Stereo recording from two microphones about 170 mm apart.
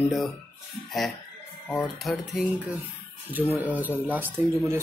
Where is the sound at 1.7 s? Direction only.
5° left (ahead or behind).